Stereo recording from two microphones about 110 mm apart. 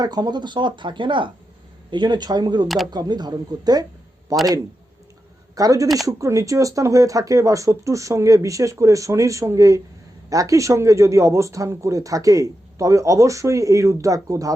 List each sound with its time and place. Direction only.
0.0 s speech: 35° right (ahead or behind)
2.6 s speech: centre (ahead or behind)
2.9 s speech: 40° right (ahead or behind)
5.5 s a man's voice: 30° right (ahead or behind)